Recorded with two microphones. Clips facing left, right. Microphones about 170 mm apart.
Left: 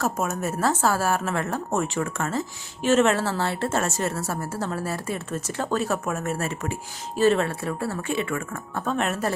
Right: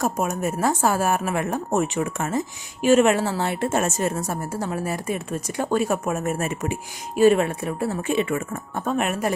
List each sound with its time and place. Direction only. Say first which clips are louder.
0.0 s a woman's voice: right 2 dB; 15° right (ahead or behind)